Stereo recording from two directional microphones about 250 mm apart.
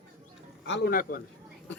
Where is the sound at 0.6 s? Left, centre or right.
Left.